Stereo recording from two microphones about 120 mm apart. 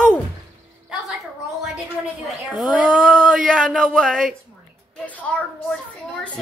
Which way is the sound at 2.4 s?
5° right (ahead or behind).